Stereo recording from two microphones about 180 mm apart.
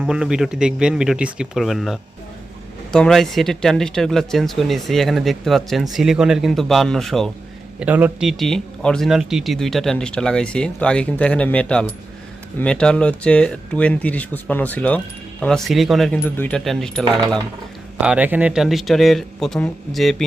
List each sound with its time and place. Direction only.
0.0 s speech: 5° right (ahead or behind)
7.8 s speech: 10° right (ahead or behind)
17.2 s speech: 20° right (ahead or behind)
18.0 s speech: 5° right (ahead or behind)